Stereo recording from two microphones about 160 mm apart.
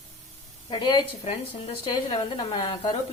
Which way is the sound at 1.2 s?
40° left (ahead or behind).